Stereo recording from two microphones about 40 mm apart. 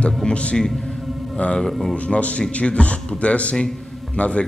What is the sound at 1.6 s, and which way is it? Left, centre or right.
Speech, centre.